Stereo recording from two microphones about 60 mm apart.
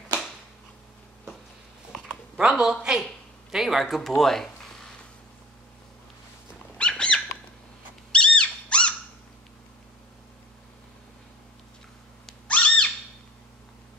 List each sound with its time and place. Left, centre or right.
2.3 s speech: centre
6.8 s bird: centre
8.1 s dog: centre
12.4 s a sound: centre